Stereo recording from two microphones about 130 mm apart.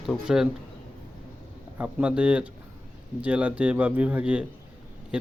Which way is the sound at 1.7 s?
10° right (ahead or behind).